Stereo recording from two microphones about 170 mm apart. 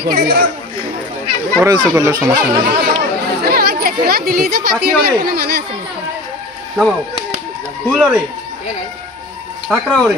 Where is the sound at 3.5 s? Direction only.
65° right (ahead or behind).